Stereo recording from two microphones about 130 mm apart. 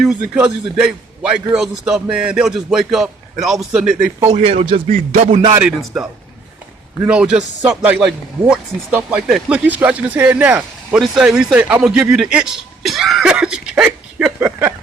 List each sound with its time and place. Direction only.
0.0 s a man's voice: 5° right (ahead or behind)
4.3 s speech: 60° right (ahead or behind)
4.9 s music: 85° right
5.4 s speech: 30° right (ahead or behind)
5.6 s speech: 5° right (ahead or behind)
7.1 s a man's voice: 5° right (ahead or behind)